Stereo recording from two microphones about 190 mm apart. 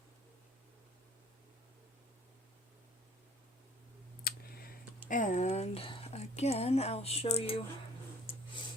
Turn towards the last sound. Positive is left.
turn(degrees=30)  # may be behind; listen again after turning